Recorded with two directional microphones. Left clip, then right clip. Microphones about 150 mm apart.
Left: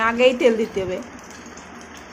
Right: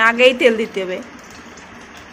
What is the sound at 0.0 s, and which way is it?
Speech, centre (ahead or behind).